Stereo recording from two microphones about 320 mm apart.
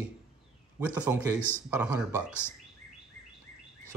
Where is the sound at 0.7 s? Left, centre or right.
Centre.